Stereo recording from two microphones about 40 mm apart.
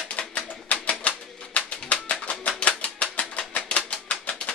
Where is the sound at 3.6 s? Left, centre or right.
Left.